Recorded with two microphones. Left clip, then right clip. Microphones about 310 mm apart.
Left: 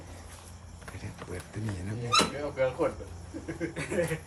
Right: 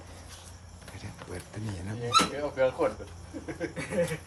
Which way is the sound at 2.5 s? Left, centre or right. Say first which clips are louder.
Right 2 dB; right.